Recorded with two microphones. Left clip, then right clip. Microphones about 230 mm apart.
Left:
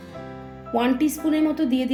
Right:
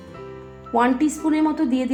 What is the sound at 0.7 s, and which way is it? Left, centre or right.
A woman's voice, centre.